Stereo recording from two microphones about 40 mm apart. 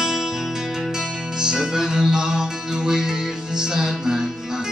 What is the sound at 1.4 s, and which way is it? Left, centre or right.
Music, centre.